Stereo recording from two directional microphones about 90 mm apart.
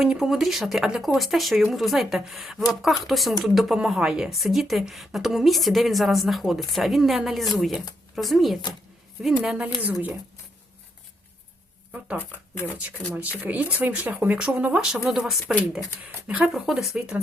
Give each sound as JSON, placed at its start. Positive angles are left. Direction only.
{"t": 0.0, "sound": "speech", "side_deg": -5}
{"t": 12.2, "sound": "speech", "side_deg": 20}
{"t": 13.1, "sound": "speech", "side_deg": -15}